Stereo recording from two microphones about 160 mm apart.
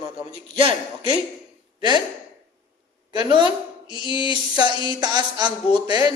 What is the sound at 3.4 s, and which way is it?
Speech, 30° left (ahead or behind).